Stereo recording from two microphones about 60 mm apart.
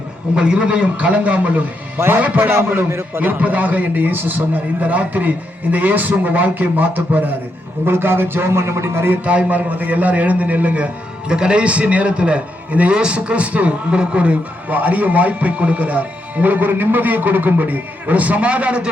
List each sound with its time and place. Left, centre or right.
0.3 s a man's voice: centre
2.0 s a man's voice: right
3.2 s a man's voice: right
7.9 s a man's voice: right
9.2 s a man's voice: right